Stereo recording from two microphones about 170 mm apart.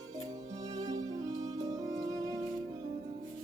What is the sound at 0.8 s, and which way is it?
Music, 20° right (ahead or behind).